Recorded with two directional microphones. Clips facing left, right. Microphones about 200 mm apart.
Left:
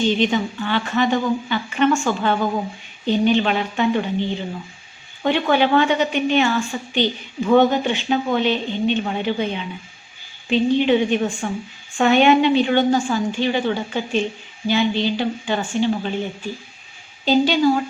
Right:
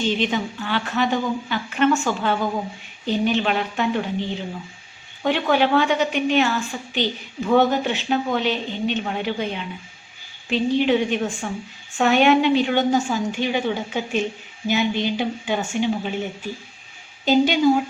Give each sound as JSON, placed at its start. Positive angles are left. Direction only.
{"t": 0.1, "sound": "a woman's voice", "side_deg": 0}
{"t": 17.2, "sound": "a woman's voice", "side_deg": -15}